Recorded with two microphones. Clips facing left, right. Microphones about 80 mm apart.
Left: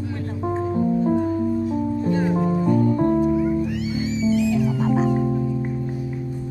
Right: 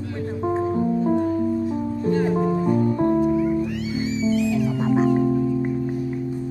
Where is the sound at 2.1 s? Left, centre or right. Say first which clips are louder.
Right 3 dB; centre.